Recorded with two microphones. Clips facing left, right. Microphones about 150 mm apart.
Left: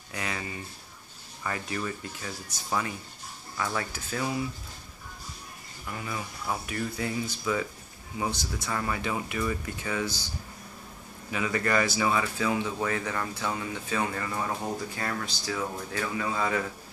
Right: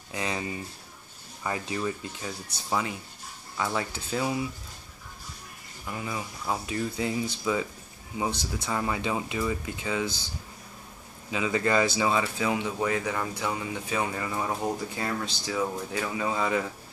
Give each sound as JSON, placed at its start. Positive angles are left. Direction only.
{"t": 0.1, "sound": "speech", "side_deg": -20}
{"t": 5.9, "sound": "speech", "side_deg": -20}
{"t": 11.2, "sound": "speech", "side_deg": -20}